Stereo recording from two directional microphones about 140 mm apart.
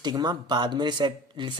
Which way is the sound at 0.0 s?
30° right (ahead or behind).